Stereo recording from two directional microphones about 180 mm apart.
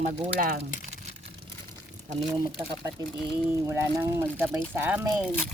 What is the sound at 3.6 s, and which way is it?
Speech, 15° right (ahead or behind).